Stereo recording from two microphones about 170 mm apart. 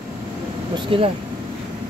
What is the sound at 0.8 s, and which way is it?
Speech, 30° right (ahead or behind).